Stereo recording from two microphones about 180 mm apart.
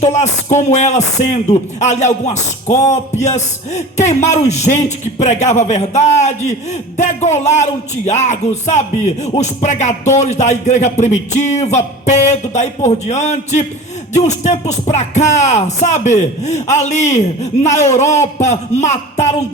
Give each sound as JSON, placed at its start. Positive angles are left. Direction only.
{"t": 0.0, "sound": "music", "side_deg": 40}